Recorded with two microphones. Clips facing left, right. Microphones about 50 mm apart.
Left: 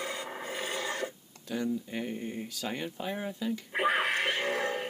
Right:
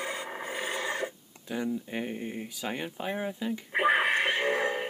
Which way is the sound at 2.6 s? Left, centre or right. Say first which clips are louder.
Right 2 dB; centre.